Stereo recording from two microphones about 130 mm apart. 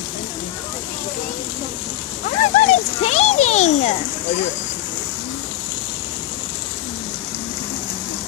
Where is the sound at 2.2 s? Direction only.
70° left (ahead or behind).